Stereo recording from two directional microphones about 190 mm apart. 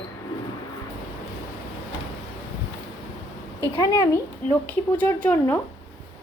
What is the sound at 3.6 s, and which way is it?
Speech, 15° left (ahead or behind).